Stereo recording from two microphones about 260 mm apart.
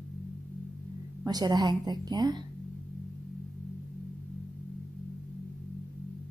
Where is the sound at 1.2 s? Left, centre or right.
Centre.